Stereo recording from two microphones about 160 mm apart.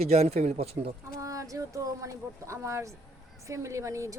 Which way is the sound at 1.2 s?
20° right (ahead or behind).